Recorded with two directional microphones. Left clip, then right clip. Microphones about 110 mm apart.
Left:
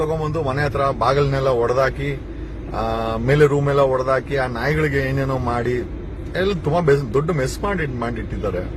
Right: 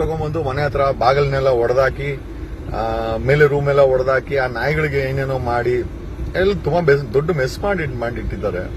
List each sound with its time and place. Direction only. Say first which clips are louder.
0.0 s speech: even; 30° left (ahead or behind)